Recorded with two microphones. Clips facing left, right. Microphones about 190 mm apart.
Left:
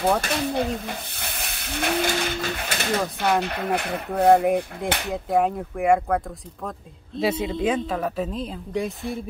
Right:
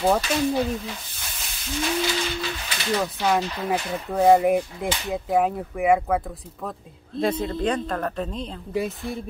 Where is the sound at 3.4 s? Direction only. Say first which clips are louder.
Left 1 dB; 60° left (ahead or behind).